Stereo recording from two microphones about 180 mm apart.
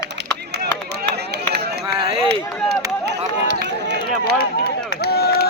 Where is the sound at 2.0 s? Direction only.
30° right (ahead or behind).